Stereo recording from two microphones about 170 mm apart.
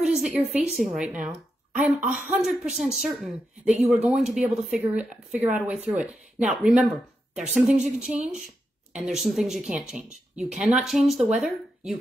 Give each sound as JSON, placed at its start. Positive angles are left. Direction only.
{"t": 0.0, "sound": "speech", "side_deg": -5}
{"t": 2.0, "sound": "speech", "side_deg": -45}
{"t": 2.2, "sound": "speech", "side_deg": -5}